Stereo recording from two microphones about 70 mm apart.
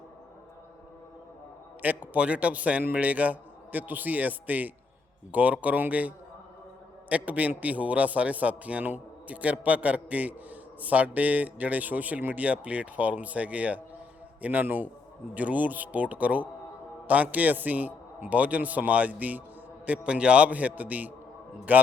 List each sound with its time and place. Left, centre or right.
1.8 s a man's voice: right